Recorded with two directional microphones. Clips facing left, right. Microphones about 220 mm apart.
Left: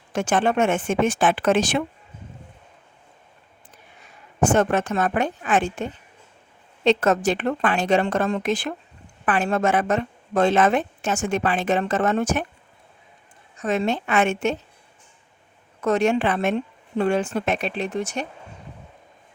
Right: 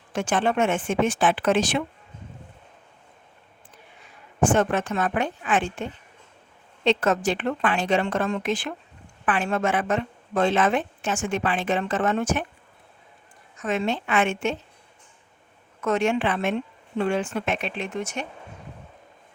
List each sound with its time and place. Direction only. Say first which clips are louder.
0.1 s speech: left 2 dB; 45° left (ahead or behind)
4.4 s a woman's voice: left 2 dB; 45° left (ahead or behind)
13.6 s a woman's voice: left 3 dB; 40° left (ahead or behind)
15.8 s a woman's voice: left 3 dB; 35° left (ahead or behind)